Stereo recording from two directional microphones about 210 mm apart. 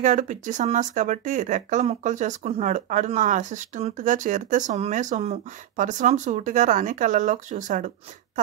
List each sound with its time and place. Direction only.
0.0 s speech: 35° right (ahead or behind)